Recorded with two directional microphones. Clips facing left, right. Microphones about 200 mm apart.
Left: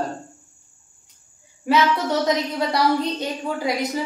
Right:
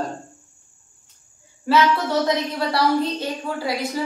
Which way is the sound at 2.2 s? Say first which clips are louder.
Left 1 dB; 20° left (ahead or behind).